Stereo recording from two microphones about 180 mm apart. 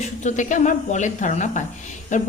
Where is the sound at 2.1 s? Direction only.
40° left (ahead or behind).